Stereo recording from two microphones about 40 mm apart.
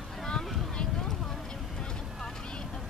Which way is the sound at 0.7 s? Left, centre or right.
Left.